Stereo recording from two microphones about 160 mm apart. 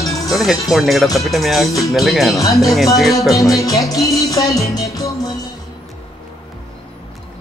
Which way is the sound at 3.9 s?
20° left (ahead or behind).